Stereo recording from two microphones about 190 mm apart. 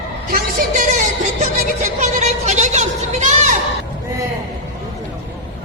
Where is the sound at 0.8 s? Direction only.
40° right (ahead or behind).